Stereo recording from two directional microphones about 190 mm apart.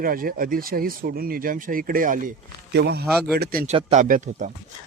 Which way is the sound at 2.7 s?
60° right (ahead or behind).